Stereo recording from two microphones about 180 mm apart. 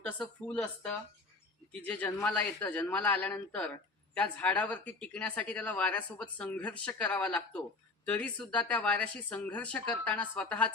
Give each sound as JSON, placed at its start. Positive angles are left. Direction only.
{"t": 0.0, "sound": "a man's voice", "side_deg": 5}